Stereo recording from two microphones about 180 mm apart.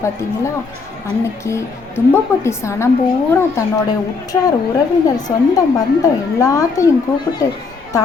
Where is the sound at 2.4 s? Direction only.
15° left (ahead or behind).